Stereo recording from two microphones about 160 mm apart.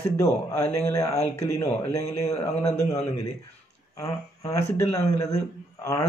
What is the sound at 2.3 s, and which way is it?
Speech, 40° left (ahead or behind).